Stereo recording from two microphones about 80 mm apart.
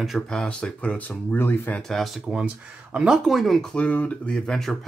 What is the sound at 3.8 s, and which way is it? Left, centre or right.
Speech, centre.